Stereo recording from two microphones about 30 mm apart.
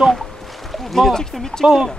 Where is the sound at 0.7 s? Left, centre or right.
Centre.